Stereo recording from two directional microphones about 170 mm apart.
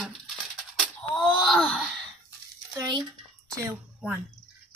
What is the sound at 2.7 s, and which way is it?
Speech, 25° right (ahead or behind).